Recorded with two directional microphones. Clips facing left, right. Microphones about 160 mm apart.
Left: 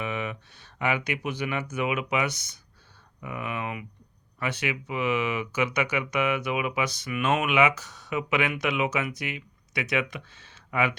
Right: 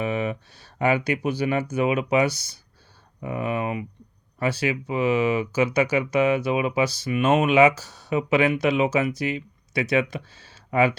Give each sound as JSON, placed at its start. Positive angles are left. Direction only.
{"t": 0.0, "sound": "speech", "side_deg": -35}